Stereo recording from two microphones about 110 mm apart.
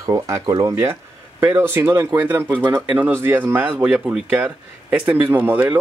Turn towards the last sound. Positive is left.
turn(degrees=-15)  # may be behind; listen again after turning